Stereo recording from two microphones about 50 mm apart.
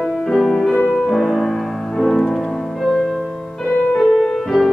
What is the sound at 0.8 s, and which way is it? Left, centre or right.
Music, centre.